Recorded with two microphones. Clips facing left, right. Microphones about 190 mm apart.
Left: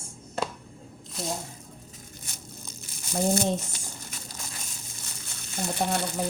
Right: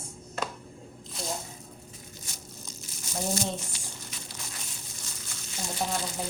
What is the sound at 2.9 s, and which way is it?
Crumpling, 55° left (ahead or behind).